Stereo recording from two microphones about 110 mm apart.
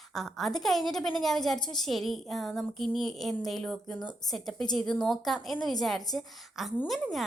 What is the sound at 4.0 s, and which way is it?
Speech, 45° left (ahead or behind).